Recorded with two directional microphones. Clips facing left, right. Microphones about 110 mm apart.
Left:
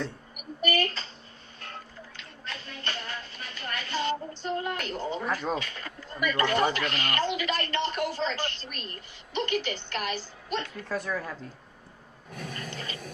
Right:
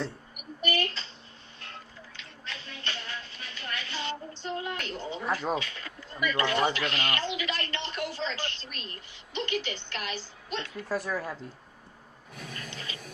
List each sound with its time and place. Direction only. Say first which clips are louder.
0.3 s a sound: left 3 dB; 45° left (ahead or behind)
5.3 s speech: right 3 dB; 5° right (ahead or behind)
5.5 s speech: even; 45° left (ahead or behind)
10.8 s speech: right 1 dB; 5° right (ahead or behind)
12.3 s toilet flush: left 4 dB; 40° left (ahead or behind)